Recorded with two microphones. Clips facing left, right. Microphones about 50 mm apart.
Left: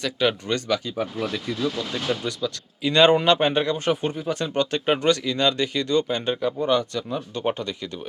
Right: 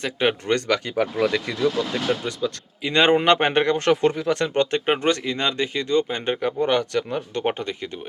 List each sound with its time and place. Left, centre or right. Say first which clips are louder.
0.0 s speech: right 1 dB; right
0.4 s speech: right 3 dB; right
2.0 s speech: right 2 dB; right
3.2 s speech: right 2 dB; right
3.8 s speech: right 5 dB; right
4.9 s speech: even; right
6.6 s speech: right 1 dB; right
7.4 s speech: right 1 dB; right